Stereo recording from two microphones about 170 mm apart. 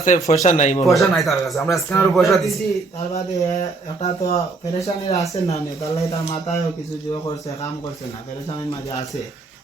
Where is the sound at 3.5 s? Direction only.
40° left (ahead or behind).